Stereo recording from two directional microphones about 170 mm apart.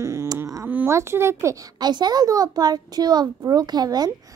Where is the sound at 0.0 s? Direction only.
15° right (ahead or behind).